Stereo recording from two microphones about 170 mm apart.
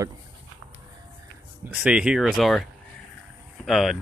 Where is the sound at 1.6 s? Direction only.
5° right (ahead or behind).